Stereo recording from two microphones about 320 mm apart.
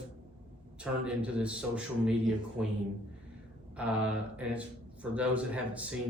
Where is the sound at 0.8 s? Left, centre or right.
Centre.